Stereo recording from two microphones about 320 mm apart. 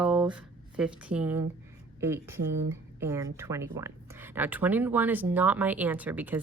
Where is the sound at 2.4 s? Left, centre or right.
Right.